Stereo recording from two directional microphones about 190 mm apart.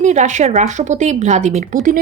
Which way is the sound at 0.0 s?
40° right (ahead or behind).